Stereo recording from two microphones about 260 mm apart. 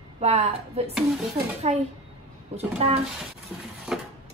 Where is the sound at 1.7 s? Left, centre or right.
Right.